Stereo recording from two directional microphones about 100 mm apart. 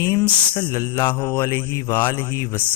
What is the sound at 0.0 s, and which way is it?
Speech, 30° left (ahead or behind).